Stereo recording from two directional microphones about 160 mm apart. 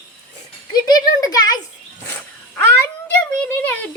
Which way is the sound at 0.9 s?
25° left (ahead or behind).